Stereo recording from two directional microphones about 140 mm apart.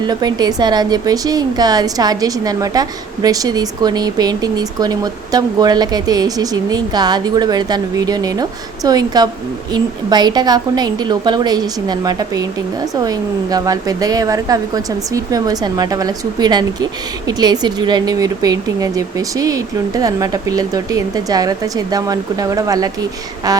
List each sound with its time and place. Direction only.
0.0 s a woman's voice: 30° right (ahead or behind)